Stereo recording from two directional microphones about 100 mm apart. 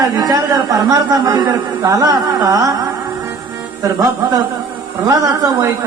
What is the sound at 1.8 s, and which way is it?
Music, 35° right (ahead or behind).